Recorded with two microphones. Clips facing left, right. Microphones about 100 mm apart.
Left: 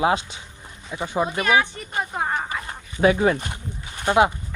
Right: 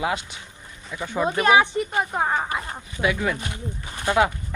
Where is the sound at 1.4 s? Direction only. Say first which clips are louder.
Right 4 dB; 25° right (ahead or behind).